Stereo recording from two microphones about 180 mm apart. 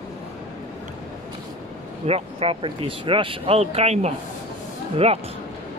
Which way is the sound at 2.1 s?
35° right (ahead or behind).